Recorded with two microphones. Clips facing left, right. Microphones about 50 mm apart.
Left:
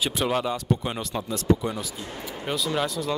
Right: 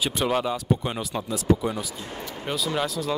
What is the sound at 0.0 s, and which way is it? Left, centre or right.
Speech, centre.